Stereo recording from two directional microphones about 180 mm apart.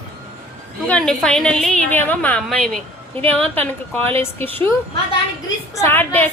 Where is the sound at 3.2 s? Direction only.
30° right (ahead or behind).